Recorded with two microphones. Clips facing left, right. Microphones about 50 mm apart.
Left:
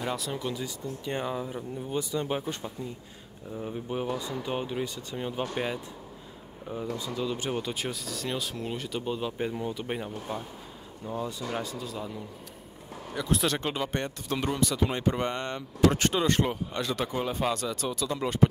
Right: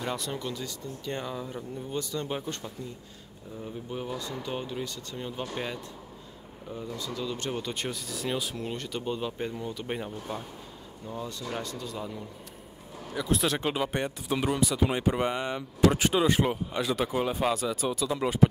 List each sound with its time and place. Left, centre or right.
0.0 s speech: centre
0.5 s speech: centre
7.0 s speech: centre
9.5 s speech: centre
9.8 s speech: centre
11.1 s speech: centre